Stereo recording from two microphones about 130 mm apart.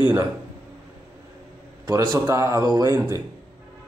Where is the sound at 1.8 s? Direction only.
25° right (ahead or behind).